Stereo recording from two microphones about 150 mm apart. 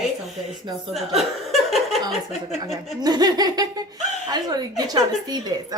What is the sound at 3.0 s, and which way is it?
A woman's voice, 25° right (ahead or behind).